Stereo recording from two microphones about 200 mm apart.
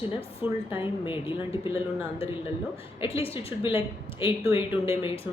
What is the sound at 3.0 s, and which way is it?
Speech, 30° left (ahead or behind).